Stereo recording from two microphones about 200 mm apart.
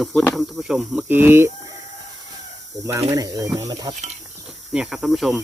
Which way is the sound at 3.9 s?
35° right (ahead or behind).